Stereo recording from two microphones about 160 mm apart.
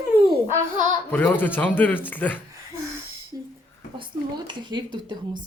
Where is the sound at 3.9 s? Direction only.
30° right (ahead or behind).